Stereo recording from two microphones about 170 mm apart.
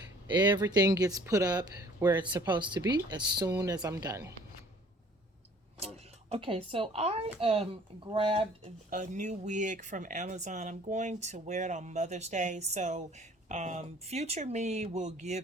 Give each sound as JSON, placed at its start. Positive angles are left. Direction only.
{"t": 0.3, "sound": "speech", "side_deg": -25}
{"t": 5.8, "sound": "speech", "side_deg": -35}
{"t": 8.9, "sound": "speech", "side_deg": -45}